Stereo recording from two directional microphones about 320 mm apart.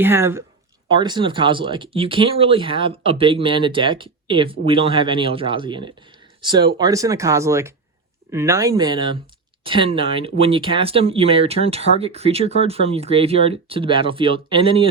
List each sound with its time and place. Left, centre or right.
0.0 s speech: centre